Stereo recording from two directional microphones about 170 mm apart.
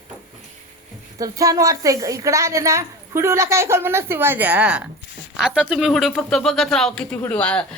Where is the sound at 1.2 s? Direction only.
20° right (ahead or behind).